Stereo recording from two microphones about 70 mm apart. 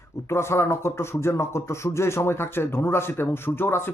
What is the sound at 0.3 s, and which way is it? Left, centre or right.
A man's voice, left.